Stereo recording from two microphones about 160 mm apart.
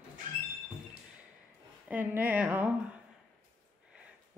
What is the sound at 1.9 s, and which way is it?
Speech, 10° right (ahead or behind).